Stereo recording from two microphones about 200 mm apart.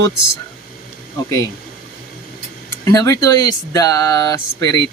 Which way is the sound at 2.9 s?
15° left (ahead or behind).